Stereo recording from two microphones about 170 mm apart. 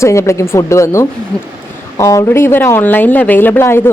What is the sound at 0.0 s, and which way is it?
Speech, 15° left (ahead or behind).